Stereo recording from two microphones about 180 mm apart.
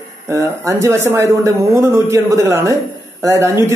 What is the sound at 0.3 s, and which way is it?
A man's voice, 15° right (ahead or behind).